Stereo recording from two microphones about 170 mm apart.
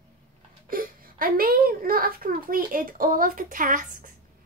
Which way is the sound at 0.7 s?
55° right (ahead or behind).